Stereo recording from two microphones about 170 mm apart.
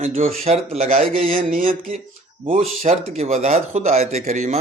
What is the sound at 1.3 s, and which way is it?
Mantra, 55° right (ahead or behind).